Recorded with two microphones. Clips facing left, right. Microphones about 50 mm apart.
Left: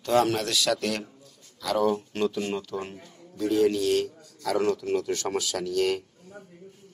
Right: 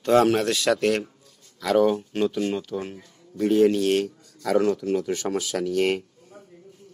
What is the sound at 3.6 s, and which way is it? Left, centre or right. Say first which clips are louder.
A man's voice: right 2 dB; right.